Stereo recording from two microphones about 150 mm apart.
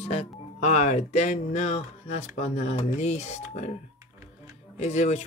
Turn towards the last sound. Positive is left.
turn(degrees=50)  # may be behind; listen again after turning